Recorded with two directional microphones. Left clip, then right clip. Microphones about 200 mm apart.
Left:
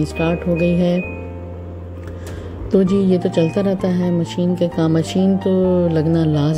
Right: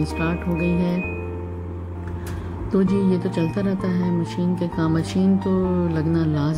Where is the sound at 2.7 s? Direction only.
20° left (ahead or behind).